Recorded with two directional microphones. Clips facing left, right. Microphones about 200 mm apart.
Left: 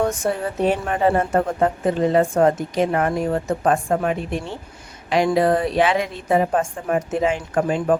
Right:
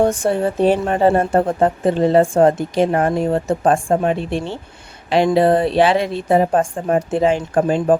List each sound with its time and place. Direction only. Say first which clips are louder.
0.0 s a woman's voice: right 5 dB; 30° right (ahead or behind)